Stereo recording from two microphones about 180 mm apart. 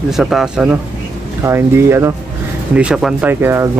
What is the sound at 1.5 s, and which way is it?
Speech, 15° right (ahead or behind).